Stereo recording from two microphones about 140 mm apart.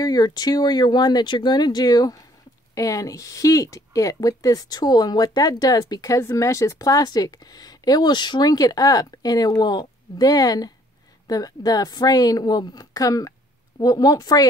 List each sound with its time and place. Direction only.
0.0 s speech: 30° left (ahead or behind)